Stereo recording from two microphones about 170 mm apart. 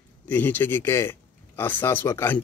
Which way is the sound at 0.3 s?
10° left (ahead or behind).